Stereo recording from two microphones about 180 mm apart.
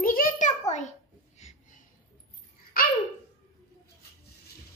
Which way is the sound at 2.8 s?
55° left (ahead or behind).